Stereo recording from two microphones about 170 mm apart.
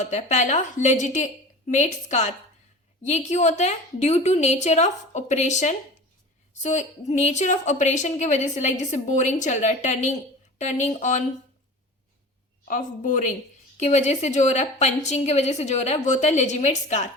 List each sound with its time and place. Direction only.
0.0 s a woman's voice: 45° left (ahead or behind)
12.6 s a woman's voice: 50° left (ahead or behind)